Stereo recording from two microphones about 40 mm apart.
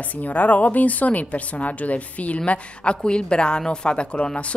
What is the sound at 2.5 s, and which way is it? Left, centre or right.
A woman's voice, left.